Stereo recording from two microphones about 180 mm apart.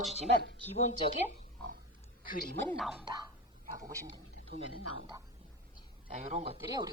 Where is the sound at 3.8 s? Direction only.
20° right (ahead or behind).